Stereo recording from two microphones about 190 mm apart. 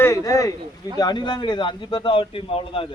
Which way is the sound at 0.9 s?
20° left (ahead or behind).